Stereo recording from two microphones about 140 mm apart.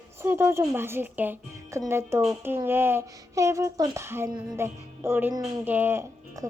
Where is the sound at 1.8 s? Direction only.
20° right (ahead or behind).